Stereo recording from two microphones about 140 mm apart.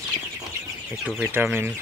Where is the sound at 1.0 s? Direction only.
10° right (ahead or behind).